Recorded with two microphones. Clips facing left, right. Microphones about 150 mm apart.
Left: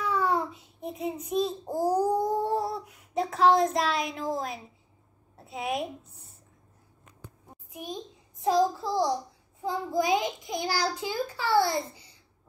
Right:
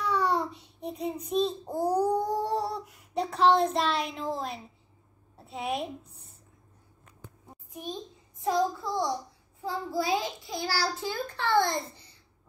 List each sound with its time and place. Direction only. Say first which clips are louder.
0.0 s a sound: even; 5° left (ahead or behind)
1.3 s babbling: even; 5° left (ahead or behind)
5.4 s a woman's voice: left 1 dB; centre (ahead or behind)
7.7 s a sound: even; 10° left (ahead or behind)
8.5 s child singing: left 3 dB; 25° left (ahead or behind)
9.6 s a child's voice: left 3 dB; 20° left (ahead or behind)